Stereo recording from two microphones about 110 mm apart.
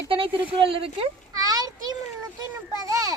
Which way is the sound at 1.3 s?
35° right (ahead or behind).